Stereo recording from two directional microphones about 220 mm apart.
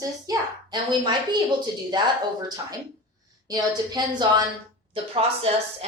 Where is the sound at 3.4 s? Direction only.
15° right (ahead or behind).